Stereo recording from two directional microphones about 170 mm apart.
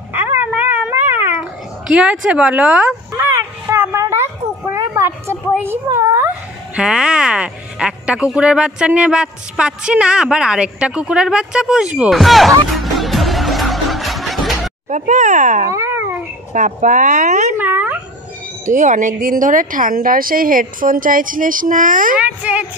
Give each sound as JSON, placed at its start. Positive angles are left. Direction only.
{"t": 0.1, "sound": "dog", "side_deg": -10}
{"t": 1.9, "sound": "speech", "side_deg": -5}
{"t": 14.9, "sound": "a woman's voice", "side_deg": -45}
{"t": 15.7, "sound": "a sound", "side_deg": -15}
{"t": 16.5, "sound": "a woman's voice", "side_deg": -50}
{"t": 17.6, "sound": "a sound", "side_deg": -10}
{"t": 18.7, "sound": "a woman's voice", "side_deg": -50}
{"t": 22.2, "sound": "speech", "side_deg": -10}